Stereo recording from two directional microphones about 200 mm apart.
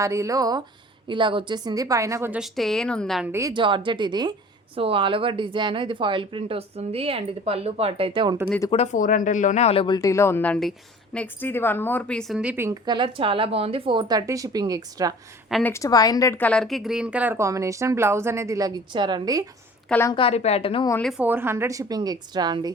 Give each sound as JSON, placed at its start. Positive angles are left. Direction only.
{"t": 0.0, "sound": "a woman's voice", "side_deg": -15}
{"t": 3.3, "sound": "speech", "side_deg": -20}
{"t": 8.4, "sound": "a woman's voice", "side_deg": 15}
{"t": 8.7, "sound": "speech", "side_deg": 35}
{"t": 15.4, "sound": "a woman's voice", "side_deg": 0}
{"t": 15.7, "sound": "a woman's voice", "side_deg": 15}
{"t": 19.9, "sound": "a woman's voice", "side_deg": 10}
{"t": 20.1, "sound": "speech", "side_deg": 30}
{"t": 20.9, "sound": "a woman's voice", "side_deg": 0}